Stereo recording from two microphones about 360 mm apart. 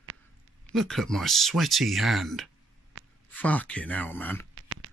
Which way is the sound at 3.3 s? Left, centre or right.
Centre.